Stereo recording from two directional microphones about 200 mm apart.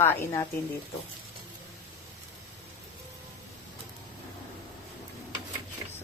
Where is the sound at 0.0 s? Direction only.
10° left (ahead or behind).